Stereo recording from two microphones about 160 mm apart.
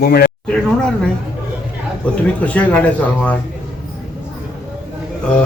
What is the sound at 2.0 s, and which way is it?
Speech, 5° left (ahead or behind).